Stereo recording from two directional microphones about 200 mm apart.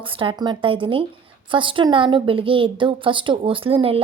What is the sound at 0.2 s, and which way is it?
A woman's voice, 25° right (ahead or behind).